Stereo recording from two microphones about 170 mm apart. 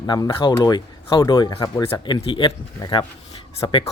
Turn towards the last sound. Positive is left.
turn(degrees=25)  # may be behind; listen again after turning